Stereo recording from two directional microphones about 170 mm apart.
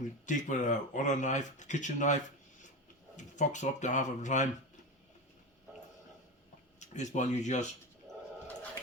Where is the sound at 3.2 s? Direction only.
45° left (ahead or behind).